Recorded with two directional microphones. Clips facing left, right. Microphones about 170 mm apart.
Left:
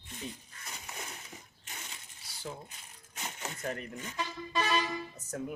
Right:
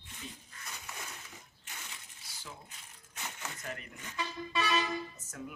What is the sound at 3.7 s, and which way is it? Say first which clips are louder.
Speech: left 6 dB; 40° left (ahead or behind).